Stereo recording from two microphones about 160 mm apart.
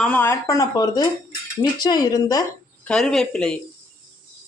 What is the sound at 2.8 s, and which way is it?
Speech, 5° left (ahead or behind).